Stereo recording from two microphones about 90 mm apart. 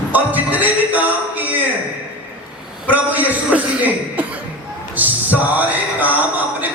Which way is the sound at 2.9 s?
20° right (ahead or behind).